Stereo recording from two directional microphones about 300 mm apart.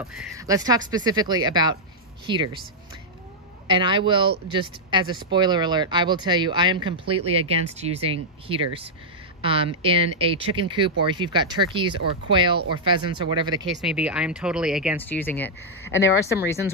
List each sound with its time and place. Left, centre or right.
0.0 s speech: centre
3.6 s speech: centre
13.7 s speech: centre
15.9 s speech: left